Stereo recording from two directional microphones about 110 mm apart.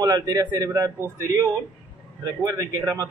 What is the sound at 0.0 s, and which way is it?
A man's voice, 30° right (ahead or behind).